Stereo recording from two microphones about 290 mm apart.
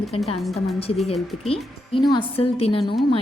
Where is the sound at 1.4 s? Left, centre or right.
Centre.